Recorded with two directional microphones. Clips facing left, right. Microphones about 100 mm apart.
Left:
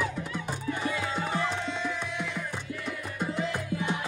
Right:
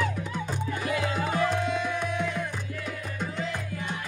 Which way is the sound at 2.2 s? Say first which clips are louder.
Right 4 dB; centre (ahead or behind).